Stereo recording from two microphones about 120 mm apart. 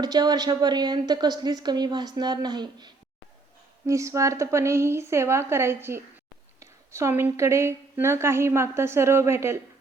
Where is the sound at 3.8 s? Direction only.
25° right (ahead or behind).